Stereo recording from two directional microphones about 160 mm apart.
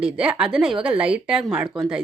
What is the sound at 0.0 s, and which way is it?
A woman's voice, 5° right (ahead or behind).